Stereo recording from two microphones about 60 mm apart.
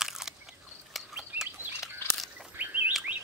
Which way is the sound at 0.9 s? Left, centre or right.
Centre.